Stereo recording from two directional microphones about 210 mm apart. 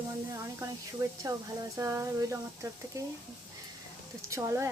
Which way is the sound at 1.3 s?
20° right (ahead or behind).